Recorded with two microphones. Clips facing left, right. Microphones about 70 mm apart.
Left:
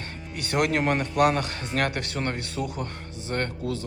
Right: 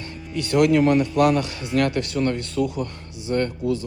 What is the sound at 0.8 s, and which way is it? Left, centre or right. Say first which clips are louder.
Speech: right 7 dB; left.